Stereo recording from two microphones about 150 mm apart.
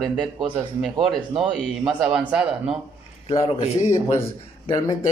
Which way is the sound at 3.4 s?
40° left (ahead or behind).